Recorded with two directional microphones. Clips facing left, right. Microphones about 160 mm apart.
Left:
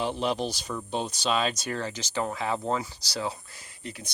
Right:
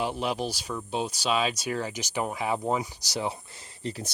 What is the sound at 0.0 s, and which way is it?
Speech, 5° right (ahead or behind).